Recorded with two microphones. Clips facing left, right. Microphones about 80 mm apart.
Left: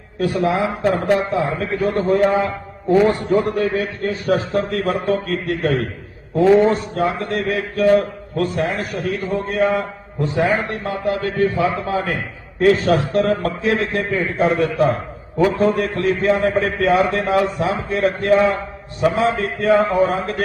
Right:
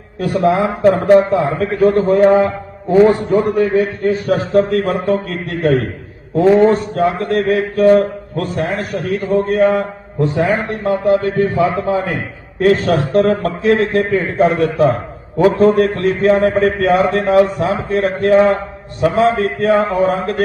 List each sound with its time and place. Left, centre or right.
0.4 s a man's voice: right
0.9 s a man's voice: right
1.7 s a man's voice: right
3.0 s a man's voice: right
10.5 s a man's voice: right
12.6 s a man's voice: right
14.3 s a man's voice: right
19.2 s a man's voice: right